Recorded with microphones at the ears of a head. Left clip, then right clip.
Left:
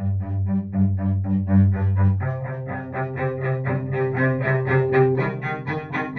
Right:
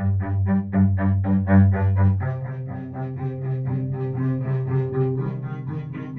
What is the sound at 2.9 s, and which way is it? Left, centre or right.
Cello, left.